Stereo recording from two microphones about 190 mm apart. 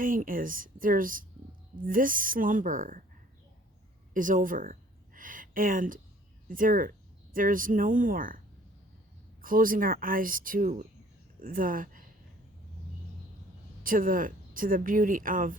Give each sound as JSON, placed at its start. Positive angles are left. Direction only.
{"t": 0.0, "sound": "speech", "side_deg": -45}
{"t": 4.1, "sound": "speech", "side_deg": -45}
{"t": 9.4, "sound": "speech", "side_deg": -45}
{"t": 13.8, "sound": "speech", "side_deg": -45}